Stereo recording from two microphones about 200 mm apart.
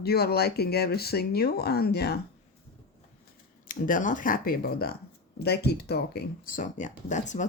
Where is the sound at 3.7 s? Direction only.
40° left (ahead or behind).